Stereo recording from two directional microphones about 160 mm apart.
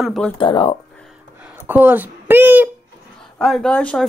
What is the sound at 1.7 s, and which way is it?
Speech, 10° right (ahead or behind).